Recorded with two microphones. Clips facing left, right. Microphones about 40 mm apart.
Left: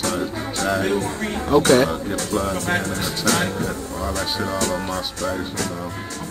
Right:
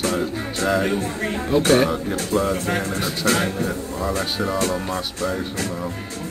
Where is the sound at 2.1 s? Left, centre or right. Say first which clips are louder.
Right 2 dB; right.